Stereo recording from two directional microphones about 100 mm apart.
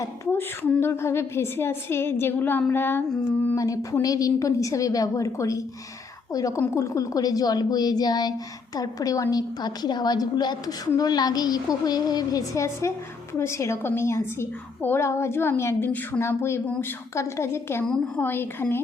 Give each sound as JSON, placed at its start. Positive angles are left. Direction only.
{"t": 0.3, "sound": "a woman's voice", "side_deg": 20}
{"t": 3.5, "sound": "a woman's voice", "side_deg": 35}
{"t": 6.7, "sound": "a woman's voice", "side_deg": 30}